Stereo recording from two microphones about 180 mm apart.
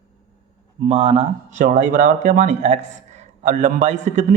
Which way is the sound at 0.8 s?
35° right (ahead or behind).